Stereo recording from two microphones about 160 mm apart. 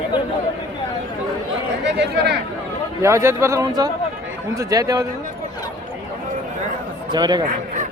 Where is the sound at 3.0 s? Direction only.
15° right (ahead or behind).